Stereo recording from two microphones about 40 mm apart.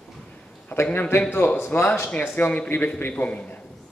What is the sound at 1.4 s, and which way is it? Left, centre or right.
Speech, left.